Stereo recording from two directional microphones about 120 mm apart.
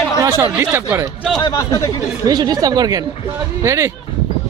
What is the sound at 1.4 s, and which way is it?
Speech, 35° left (ahead or behind).